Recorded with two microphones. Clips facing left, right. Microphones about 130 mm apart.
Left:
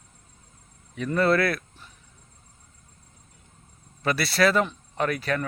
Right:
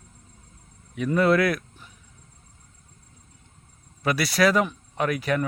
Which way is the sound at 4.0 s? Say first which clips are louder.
Right 1 dB; 10° right (ahead or behind).